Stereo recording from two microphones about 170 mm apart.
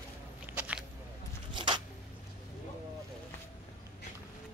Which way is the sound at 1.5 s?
30° right (ahead or behind).